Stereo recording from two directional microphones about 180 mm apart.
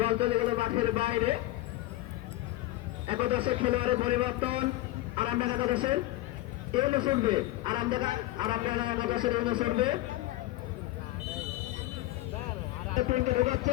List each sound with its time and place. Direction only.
0.0 s a man's voice: 30° right (ahead or behind)
3.1 s a man's voice: 30° right (ahead or behind)
13.1 s a man's voice: 40° right (ahead or behind)